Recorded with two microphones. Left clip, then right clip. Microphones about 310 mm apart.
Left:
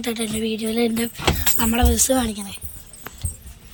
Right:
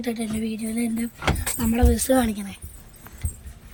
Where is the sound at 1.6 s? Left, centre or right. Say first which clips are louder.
Left 3 dB; centre.